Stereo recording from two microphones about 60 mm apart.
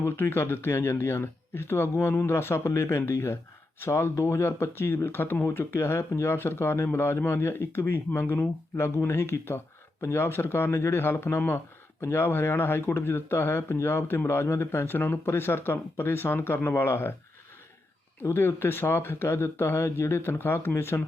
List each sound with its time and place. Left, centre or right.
0.0 s speech: left
11.9 s speech: left
18.2 s speech: left